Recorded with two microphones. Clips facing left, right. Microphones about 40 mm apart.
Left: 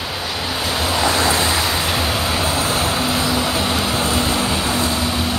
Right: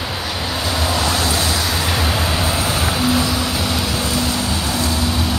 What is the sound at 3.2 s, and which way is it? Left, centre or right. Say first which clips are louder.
Vehicle: left 1 dB; centre.